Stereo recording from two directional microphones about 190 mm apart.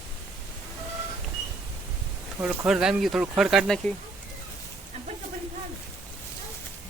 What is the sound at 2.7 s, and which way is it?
Speech, 5° right (ahead or behind).